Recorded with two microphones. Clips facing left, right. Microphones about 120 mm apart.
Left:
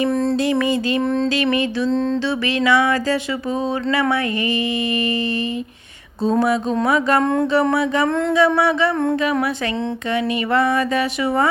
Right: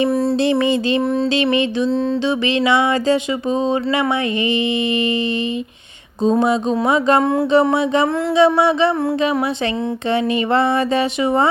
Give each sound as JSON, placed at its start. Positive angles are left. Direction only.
{"t": 0.1, "sound": "music", "side_deg": -10}
{"t": 0.3, "sound": "speech", "side_deg": -25}
{"t": 1.0, "sound": "a sound", "side_deg": -10}
{"t": 1.4, "sound": "speech", "side_deg": -25}
{"t": 1.9, "sound": "music", "side_deg": -5}
{"t": 2.2, "sound": "speech", "side_deg": -25}
{"t": 6.2, "sound": "speech", "side_deg": -20}
{"t": 7.2, "sound": "a sound", "side_deg": -5}
{"t": 7.5, "sound": "speech", "side_deg": -20}
{"t": 10.1, "sound": "speech", "side_deg": -25}